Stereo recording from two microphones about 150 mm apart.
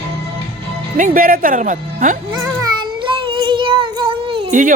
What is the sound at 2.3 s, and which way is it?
Child singing, 30° right (ahead or behind).